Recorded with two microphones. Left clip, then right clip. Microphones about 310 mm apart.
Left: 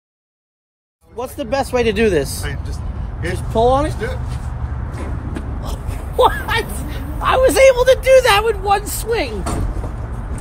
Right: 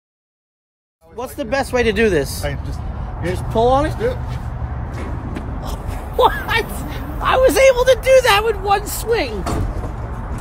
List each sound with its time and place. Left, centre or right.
1.1 s speech: centre
2.4 s vehicle: right
3.3 s speech: centre
5.3 s vehicle: centre
6.9 s speech: centre